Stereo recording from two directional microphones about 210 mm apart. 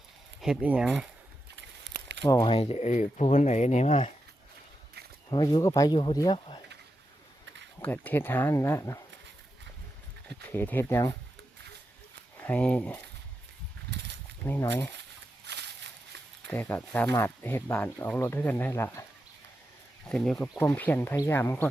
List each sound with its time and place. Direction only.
0.4 s speech: 5° right (ahead or behind)
1.8 s a sound: 55° right (ahead or behind)
2.2 s speech: 20° left (ahead or behind)
5.3 s speech: 20° left (ahead or behind)
7.8 s speech: 10° left (ahead or behind)
10.2 s speech: 10° left (ahead or behind)
12.4 s speech: 5° left (ahead or behind)
14.4 s speech: 10° left (ahead or behind)
15.4 s a sound: 55° right (ahead or behind)
16.5 s speech: 10° left (ahead or behind)
20.1 s speech: centre (ahead or behind)